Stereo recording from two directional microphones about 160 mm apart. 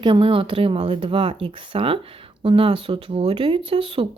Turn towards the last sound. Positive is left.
turn(degrees=-35)  # may be behind; listen again after turning